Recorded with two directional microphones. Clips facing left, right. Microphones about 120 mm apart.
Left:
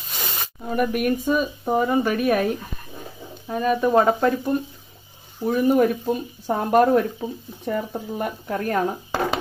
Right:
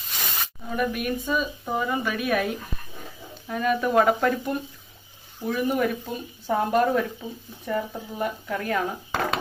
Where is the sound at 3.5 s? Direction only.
25° left (ahead or behind).